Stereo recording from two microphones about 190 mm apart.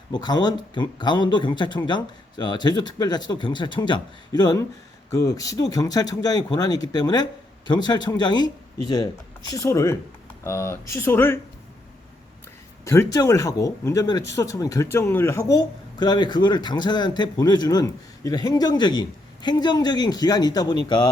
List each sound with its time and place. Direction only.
0.1 s speech: 20° left (ahead or behind)
9.5 s speech: 15° left (ahead or behind)
12.8 s speech: 15° left (ahead or behind)